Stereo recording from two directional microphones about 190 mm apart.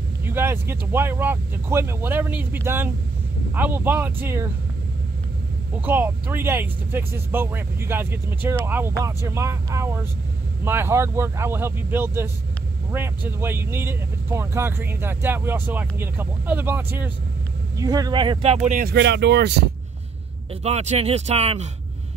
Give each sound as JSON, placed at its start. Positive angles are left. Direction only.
{"t": 0.2, "sound": "speech", "side_deg": -10}
{"t": 5.8, "sound": "speech", "side_deg": -10}
{"t": 20.6, "sound": "speech", "side_deg": -35}